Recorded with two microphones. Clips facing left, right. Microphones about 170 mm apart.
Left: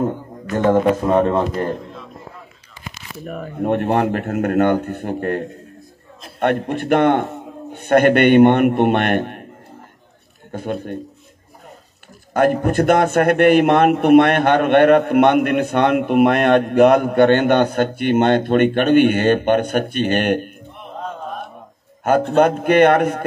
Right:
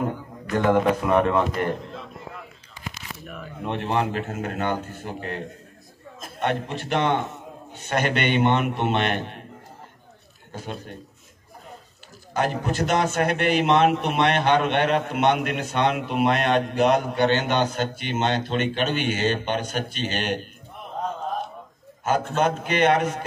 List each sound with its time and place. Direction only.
0.7 s a man's voice: 20° left (ahead or behind)
3.3 s a man's voice: 50° left (ahead or behind)
6.4 s a man's voice: 55° left (ahead or behind)
10.5 s a man's voice: 55° left (ahead or behind)
12.4 s a man's voice: 55° left (ahead or behind)
22.0 s a man's voice: 55° left (ahead or behind)